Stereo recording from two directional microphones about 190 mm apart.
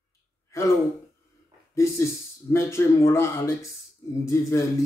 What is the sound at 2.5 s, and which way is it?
Music, 15° left (ahead or behind).